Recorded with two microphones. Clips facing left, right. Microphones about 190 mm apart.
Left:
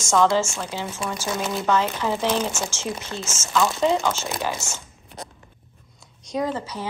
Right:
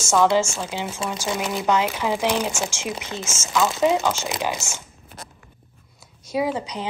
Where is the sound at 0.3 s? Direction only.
20° right (ahead or behind).